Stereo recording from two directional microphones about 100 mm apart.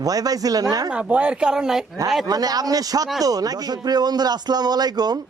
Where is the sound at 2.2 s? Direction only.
40° right (ahead or behind).